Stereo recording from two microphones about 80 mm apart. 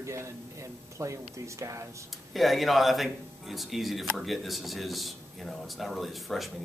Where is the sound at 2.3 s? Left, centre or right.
Centre.